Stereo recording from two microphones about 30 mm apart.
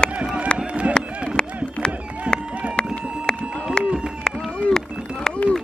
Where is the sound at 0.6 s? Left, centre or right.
Right.